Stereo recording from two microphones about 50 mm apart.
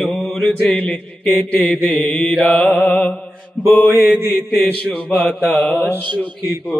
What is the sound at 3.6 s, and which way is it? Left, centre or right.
A man's voice, left.